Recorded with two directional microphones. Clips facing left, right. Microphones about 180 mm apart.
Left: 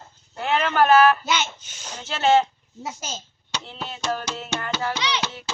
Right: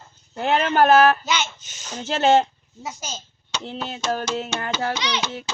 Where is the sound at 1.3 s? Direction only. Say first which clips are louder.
Even; 5° left (ahead or behind).